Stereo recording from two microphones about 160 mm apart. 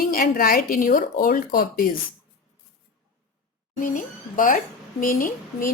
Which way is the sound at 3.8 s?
55° left (ahead or behind).